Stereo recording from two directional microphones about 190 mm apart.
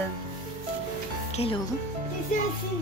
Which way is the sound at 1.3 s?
30° left (ahead or behind).